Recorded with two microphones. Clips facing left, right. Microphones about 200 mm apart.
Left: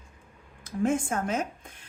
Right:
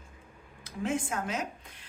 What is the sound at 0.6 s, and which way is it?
Speech, 50° left (ahead or behind).